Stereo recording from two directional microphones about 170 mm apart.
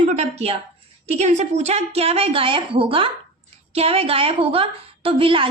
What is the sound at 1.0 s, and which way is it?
A woman's voice, 40° right (ahead or behind).